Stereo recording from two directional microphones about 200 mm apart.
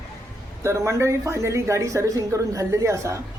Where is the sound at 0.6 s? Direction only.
15° right (ahead or behind).